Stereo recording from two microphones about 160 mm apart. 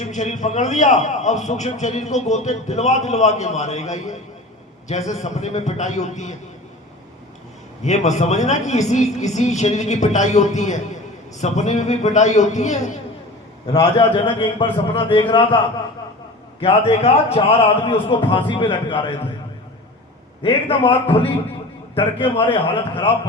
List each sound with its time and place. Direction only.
0.0 s a man's voice: 50° left (ahead or behind)
7.8 s a man's voice: 45° left (ahead or behind)
14.0 s a man's voice: 30° left (ahead or behind)
20.4 s a man's voice: 30° left (ahead or behind)